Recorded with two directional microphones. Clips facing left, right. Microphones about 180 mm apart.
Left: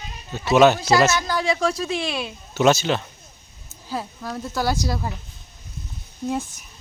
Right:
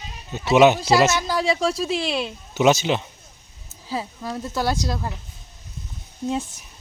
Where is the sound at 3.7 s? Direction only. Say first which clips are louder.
Right 1 dB; centre (ahead or behind).